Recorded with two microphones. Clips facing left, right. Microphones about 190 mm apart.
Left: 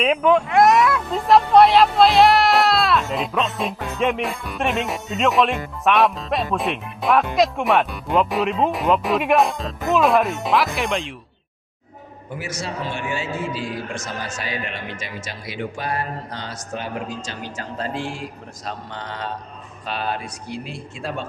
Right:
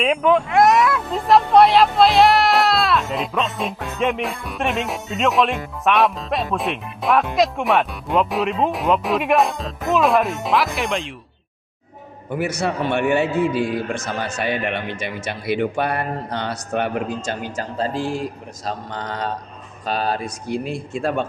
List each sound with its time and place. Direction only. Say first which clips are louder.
0.0 s speech: even; centre (ahead or behind)
12.3 s a man's voice: right 7 dB; 60° right (ahead or behind)
17.7 s a man's voice: right 5 dB; 35° right (ahead or behind); by 21.2 s 55° right (ahead or behind)